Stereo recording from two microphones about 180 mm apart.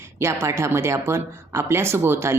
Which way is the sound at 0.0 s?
15° right (ahead or behind).